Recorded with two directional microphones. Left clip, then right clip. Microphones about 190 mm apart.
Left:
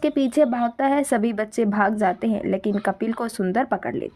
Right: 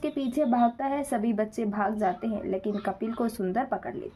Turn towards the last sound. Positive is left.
turn(degrees=35)  # may be behind; listen again after turning